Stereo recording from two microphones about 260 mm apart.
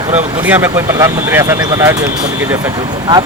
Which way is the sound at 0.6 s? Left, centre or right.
Centre.